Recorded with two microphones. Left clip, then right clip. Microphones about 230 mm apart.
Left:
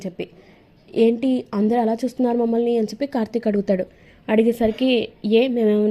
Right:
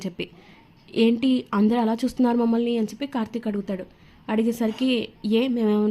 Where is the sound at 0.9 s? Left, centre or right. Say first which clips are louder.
Left 3 dB; centre.